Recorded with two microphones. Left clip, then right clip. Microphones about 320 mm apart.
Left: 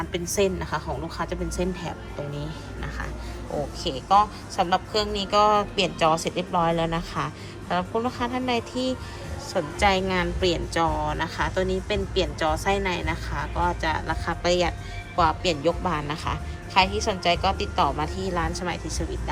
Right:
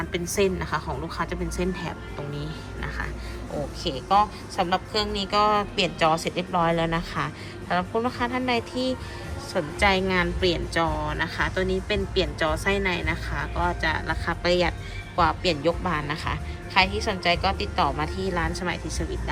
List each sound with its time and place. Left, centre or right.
0.0 s speech: centre